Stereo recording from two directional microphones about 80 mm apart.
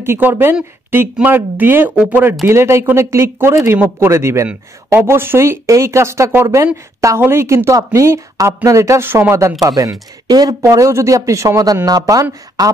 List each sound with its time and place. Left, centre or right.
0.0 s speech: right
2.4 s speech: right